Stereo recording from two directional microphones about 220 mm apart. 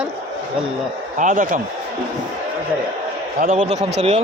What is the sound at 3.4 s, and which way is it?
Speech, 35° right (ahead or behind).